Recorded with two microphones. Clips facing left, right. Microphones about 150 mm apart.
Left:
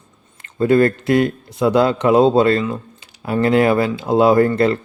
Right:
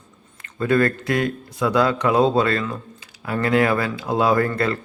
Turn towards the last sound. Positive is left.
turn(degrees=25)  # may be behind; listen again after turning